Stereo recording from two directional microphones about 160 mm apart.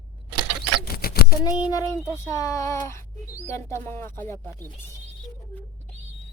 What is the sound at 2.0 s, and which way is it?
Speech, 20° left (ahead or behind).